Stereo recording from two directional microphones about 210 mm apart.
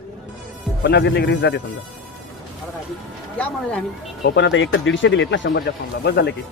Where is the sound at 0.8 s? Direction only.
55° left (ahead or behind).